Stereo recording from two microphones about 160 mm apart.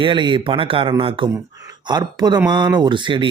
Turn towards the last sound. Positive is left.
turn(degrees=-30)  # may be behind; listen again after turning